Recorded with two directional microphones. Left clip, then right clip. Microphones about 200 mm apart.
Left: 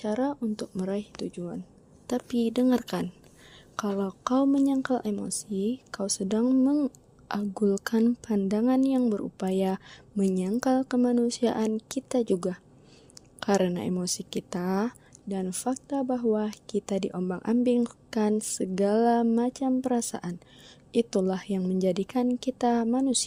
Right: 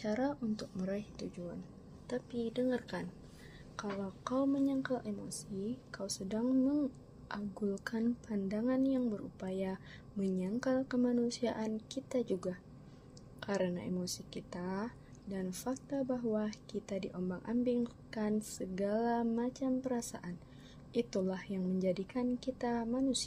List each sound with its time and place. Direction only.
0.0 s a woman's voice: 50° left (ahead or behind)